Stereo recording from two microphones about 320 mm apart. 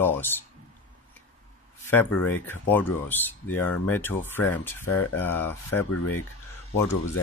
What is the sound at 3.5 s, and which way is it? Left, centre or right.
Speech, left.